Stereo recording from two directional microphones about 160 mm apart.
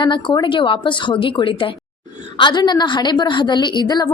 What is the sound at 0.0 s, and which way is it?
A woman's voice, 30° left (ahead or behind).